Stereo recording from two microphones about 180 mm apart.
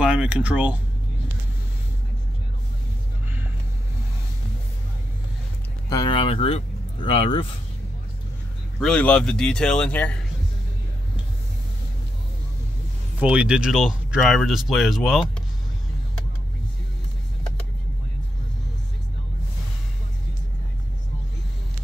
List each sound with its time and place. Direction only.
0.0 s speech: 5° right (ahead or behind)
5.9 s speech: 25° left (ahead or behind)
8.7 s speech: 5° left (ahead or behind)
13.2 s speech: 5° right (ahead or behind)